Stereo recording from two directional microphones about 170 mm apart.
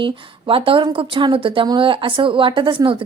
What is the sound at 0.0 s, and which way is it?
A woman's voice, 30° right (ahead or behind).